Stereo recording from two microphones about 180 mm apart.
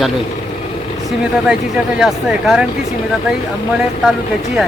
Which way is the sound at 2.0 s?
5° right (ahead or behind).